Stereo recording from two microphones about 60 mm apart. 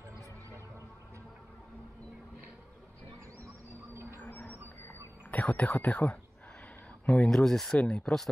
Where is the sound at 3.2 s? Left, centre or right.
Right.